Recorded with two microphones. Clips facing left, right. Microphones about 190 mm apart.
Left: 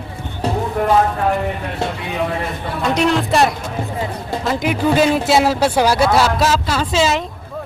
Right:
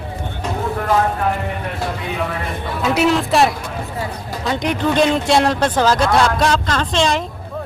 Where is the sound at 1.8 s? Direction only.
25° left (ahead or behind).